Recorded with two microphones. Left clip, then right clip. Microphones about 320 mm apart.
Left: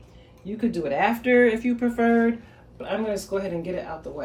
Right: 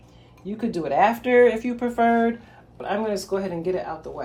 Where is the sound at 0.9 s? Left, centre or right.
Centre.